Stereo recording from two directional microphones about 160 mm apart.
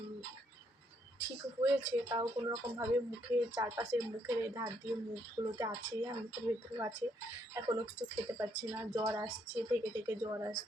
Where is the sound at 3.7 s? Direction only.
15° right (ahead or behind).